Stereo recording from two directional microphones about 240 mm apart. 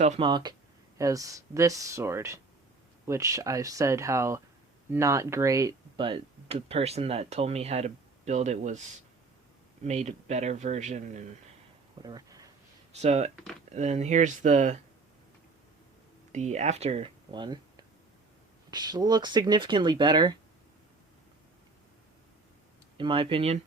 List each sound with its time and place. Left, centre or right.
0.0 s speech: right
9.8 s speech: right
12.0 s a sound: centre
12.9 s speech: right
16.3 s speech: right
23.0 s speech: right